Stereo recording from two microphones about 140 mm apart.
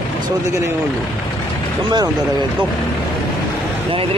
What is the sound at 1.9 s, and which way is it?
Speech, 30° right (ahead or behind).